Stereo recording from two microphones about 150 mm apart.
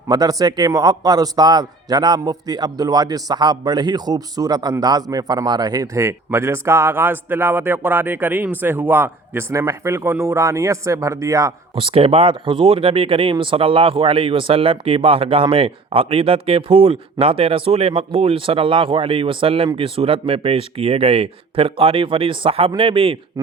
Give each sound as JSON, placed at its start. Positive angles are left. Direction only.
{"t": 0.1, "sound": "a man's voice", "side_deg": -25}
{"t": 11.7, "sound": "speech", "side_deg": -35}